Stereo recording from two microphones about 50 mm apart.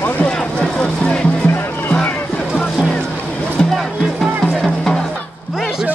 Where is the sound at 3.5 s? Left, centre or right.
Centre.